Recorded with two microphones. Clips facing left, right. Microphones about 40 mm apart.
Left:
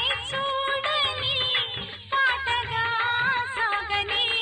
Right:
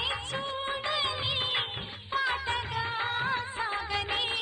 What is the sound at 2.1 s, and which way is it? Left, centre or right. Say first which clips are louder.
Music of bollywood: left 6 dB; left.